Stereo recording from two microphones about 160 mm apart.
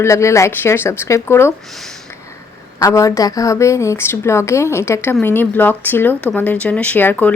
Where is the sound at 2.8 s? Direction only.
20° left (ahead or behind).